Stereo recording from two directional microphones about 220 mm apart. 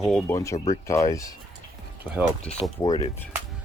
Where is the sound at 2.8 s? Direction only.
15° left (ahead or behind).